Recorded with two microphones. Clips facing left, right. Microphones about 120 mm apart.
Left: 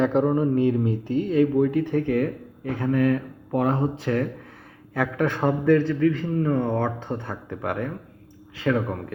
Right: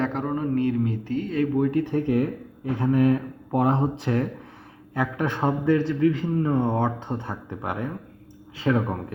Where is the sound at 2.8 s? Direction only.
20° right (ahead or behind).